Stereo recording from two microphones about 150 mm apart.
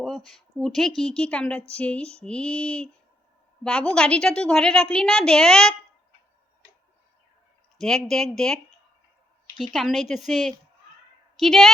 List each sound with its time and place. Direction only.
0.0 s a woman's voice: 5° left (ahead or behind)
1.7 s mantra: 10° left (ahead or behind)
3.6 s a woman's voice: 5° left (ahead or behind)
7.8 s a woman's voice: centre (ahead or behind)